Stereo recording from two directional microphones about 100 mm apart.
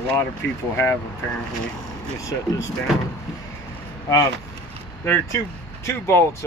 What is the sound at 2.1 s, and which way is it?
Speech, 30° left (ahead or behind).